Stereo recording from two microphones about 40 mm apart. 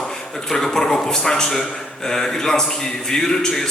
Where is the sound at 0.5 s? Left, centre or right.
Centre.